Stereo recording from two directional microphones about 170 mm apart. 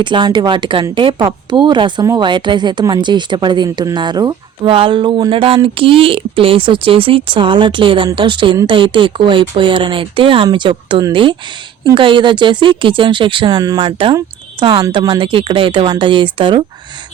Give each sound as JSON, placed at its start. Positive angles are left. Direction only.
{"t": 0.0, "sound": "speech", "side_deg": -30}